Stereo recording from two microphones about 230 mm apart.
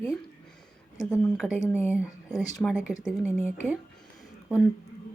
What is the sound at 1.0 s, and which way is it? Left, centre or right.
Speech, centre.